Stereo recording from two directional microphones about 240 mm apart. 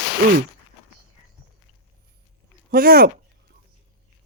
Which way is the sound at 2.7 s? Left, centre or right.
Right.